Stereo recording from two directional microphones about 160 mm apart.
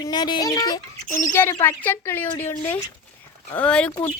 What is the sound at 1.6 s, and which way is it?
Speech, 15° left (ahead or behind).